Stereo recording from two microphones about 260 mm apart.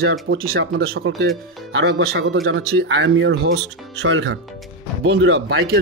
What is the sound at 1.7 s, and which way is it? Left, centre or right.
Speech, right.